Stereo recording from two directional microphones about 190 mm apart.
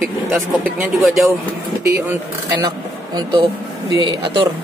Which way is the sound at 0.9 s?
Centre (ahead or behind).